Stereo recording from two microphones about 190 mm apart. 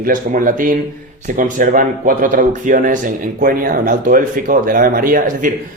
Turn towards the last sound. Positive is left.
turn(degrees=-45)  # may be behind; listen again after turning